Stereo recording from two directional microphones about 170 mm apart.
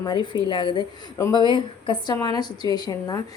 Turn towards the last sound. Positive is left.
turn(degrees=25)  # may be behind; listen again after turning